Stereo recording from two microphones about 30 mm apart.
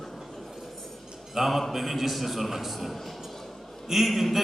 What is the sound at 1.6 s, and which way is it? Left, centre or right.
A man's voice, centre.